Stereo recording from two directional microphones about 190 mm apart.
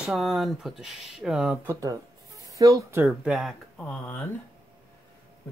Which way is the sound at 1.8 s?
15° right (ahead or behind).